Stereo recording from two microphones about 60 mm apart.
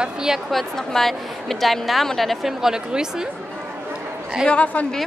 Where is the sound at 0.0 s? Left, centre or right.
Centre.